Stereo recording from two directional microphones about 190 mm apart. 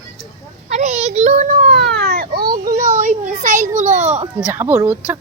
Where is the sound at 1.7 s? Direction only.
60° right (ahead or behind); by 4.3 s 35° right (ahead or behind).